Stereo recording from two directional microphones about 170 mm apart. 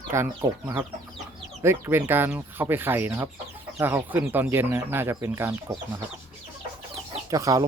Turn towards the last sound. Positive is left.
turn(degrees=-20)  # may be behind; listen again after turning